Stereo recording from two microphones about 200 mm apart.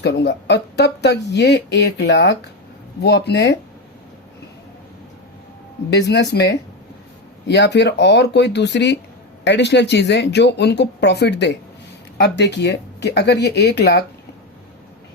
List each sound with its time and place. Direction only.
0.0 s speech: 60° left (ahead or behind)
6.3 s speech: 60° left (ahead or behind)